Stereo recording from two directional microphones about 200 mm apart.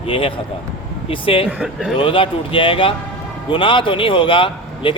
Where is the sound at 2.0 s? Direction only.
25° left (ahead or behind).